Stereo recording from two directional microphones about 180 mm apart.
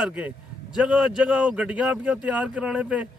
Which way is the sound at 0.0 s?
10° right (ahead or behind).